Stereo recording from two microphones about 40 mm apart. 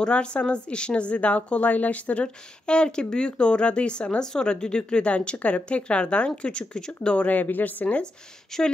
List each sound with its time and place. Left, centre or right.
0.0 s a woman's voice: left
7.2 s speech: left
8.5 s speech: centre